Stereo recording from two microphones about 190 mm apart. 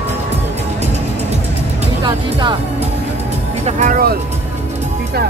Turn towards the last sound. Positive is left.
turn(degrees=-50)  # may be behind; listen again after turning